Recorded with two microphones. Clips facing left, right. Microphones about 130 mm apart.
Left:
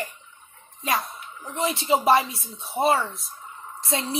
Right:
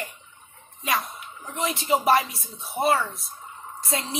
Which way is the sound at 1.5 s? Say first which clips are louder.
Left 1 dB; 30° left (ahead or behind).